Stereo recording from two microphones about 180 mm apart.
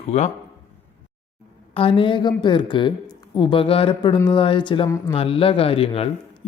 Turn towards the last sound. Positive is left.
turn(degrees=35)  # may be behind; listen again after turning